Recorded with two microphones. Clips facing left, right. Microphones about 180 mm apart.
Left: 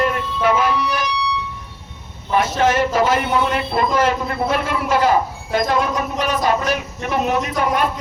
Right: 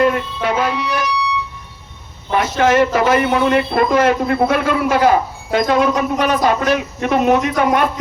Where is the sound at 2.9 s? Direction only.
60° right (ahead or behind).